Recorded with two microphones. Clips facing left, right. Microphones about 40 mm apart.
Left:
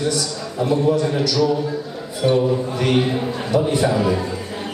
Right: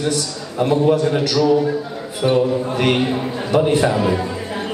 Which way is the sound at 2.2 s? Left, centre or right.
Right.